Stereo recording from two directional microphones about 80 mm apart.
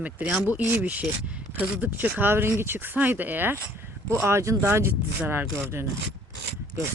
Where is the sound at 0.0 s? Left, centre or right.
Centre.